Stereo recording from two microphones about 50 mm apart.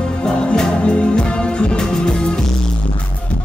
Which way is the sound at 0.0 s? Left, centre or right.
Centre.